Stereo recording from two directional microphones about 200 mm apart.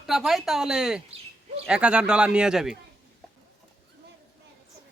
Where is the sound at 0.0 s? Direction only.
Centre (ahead or behind).